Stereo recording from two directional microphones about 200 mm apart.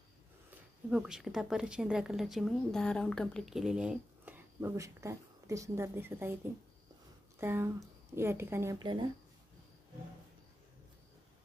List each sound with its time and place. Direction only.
0.8 s a woman's voice: 5° right (ahead or behind)
7.3 s a woman's voice: 10° right (ahead or behind)
8.7 s speech: 20° right (ahead or behind)